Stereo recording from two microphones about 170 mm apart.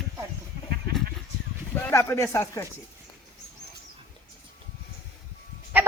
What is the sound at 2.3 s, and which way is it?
Speech, 15° left (ahead or behind).